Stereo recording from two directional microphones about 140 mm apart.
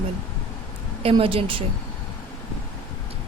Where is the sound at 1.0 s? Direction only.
40° right (ahead or behind).